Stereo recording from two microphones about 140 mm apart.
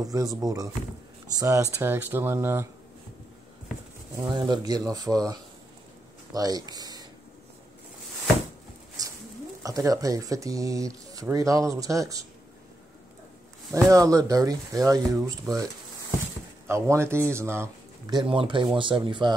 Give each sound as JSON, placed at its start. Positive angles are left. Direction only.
{"t": 0.0, "sound": "speech", "side_deg": -25}
{"t": 4.2, "sound": "speech", "side_deg": -30}
{"t": 6.7, "sound": "a sound", "side_deg": -30}
{"t": 9.0, "sound": "a sound", "side_deg": -25}
{"t": 9.6, "sound": "speech", "side_deg": -25}
{"t": 13.8, "sound": "speech", "side_deg": -25}
{"t": 18.1, "sound": "speech", "side_deg": -40}